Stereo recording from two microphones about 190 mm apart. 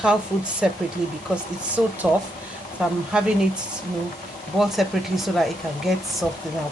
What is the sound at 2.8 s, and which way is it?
Speech, 5° right (ahead or behind).